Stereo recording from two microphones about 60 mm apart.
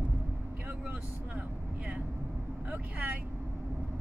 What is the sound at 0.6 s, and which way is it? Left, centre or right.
Vehicle, right.